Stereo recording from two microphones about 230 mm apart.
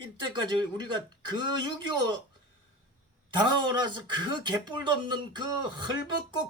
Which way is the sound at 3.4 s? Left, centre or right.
Centre.